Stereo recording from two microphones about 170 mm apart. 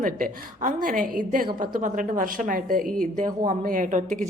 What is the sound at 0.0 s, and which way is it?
A woman's voice, 55° right (ahead or behind).